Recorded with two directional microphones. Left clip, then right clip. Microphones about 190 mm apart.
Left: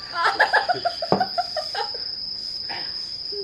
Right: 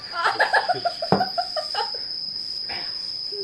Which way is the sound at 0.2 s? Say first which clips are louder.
Left 1 dB; centre (ahead or behind).